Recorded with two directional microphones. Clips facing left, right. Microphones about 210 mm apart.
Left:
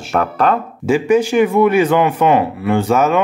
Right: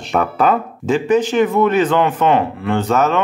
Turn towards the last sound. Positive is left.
turn(degrees=10)  # may be behind; listen again after turning